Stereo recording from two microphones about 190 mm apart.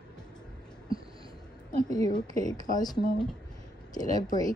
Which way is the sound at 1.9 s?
20° left (ahead or behind).